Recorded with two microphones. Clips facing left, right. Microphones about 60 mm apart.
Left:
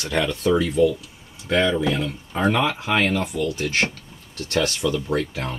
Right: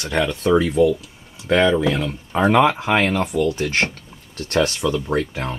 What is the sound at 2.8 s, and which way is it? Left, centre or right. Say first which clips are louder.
Speech: right 3 dB; right.